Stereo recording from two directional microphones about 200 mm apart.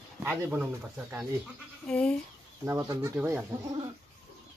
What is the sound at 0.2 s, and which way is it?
Speech, 10° right (ahead or behind).